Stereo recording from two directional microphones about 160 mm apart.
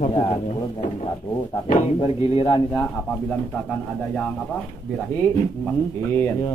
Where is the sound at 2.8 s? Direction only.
5° left (ahead or behind).